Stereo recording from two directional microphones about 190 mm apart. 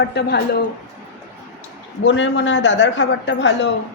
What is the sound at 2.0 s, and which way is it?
A woman's voice, 75° left (ahead or behind).